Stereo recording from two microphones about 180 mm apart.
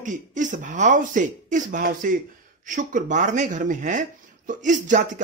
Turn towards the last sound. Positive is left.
turn(degrees=-45)  # may be behind; listen again after turning